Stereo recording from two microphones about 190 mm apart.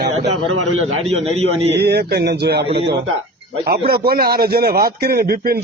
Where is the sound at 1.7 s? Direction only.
60° right (ahead or behind).